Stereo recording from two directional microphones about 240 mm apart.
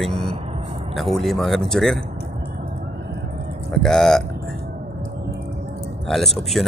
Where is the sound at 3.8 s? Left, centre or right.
Centre.